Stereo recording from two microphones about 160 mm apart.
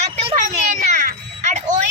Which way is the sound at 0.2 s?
35° right (ahead or behind).